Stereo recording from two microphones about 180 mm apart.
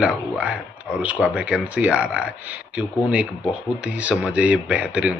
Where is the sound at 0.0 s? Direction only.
5° right (ahead or behind).